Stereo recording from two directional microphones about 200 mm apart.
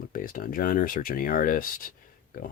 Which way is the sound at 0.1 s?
45° left (ahead or behind).